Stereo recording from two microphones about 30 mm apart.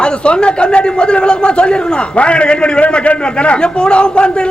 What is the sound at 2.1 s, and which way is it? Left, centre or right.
A man's voice, left.